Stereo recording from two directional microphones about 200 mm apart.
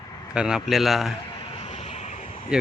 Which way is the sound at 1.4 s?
30° left (ahead or behind).